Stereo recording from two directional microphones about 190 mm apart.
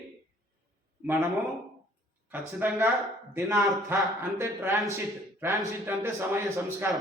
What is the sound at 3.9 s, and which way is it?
A man's voice, 10° right (ahead or behind).